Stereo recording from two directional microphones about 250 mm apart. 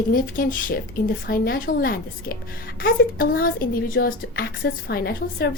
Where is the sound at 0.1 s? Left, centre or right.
Left.